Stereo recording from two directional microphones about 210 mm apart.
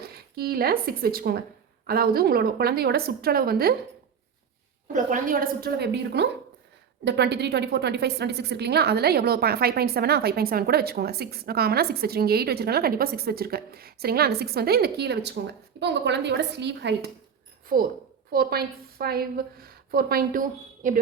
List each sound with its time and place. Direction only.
0.3 s a woman's voice: 45° right (ahead or behind)
4.9 s a woman's voice: 40° right (ahead or behind); by 17.1 s 55° right (ahead or behind)
17.7 s a woman's voice: 45° right (ahead or behind)